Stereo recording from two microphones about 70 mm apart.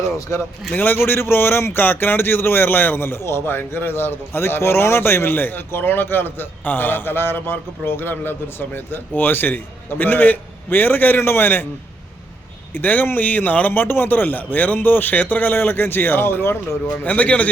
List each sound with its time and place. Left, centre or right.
0.3 s speech: left
0.7 s a man's voice: left
12.7 s speech: left
17.0 s speech: left